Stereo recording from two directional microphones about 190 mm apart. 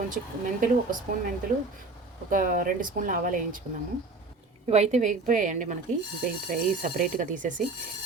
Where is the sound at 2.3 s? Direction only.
45° right (ahead or behind).